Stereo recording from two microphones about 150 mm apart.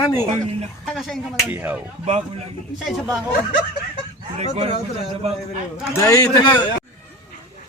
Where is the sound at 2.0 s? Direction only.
45° right (ahead or behind).